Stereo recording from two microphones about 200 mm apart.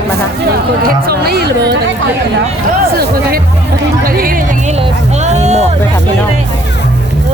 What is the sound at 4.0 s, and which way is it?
Speech, 45° right (ahead or behind).